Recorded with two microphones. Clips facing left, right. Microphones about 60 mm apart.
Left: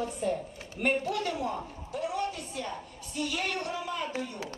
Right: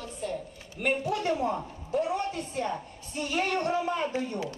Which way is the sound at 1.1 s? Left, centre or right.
Right.